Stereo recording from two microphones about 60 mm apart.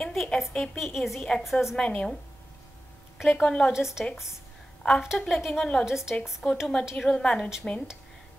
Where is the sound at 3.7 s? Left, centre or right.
Centre.